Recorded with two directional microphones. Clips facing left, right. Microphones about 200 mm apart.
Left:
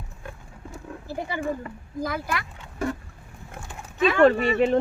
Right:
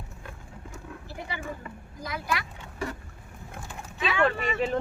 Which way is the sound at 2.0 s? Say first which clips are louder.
Left 2 dB; 50° left (ahead or behind).